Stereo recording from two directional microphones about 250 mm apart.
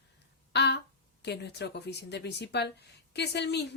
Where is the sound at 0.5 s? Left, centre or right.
Left.